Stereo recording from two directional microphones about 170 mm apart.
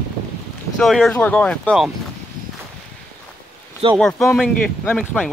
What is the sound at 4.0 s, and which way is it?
Speech, 5° left (ahead or behind).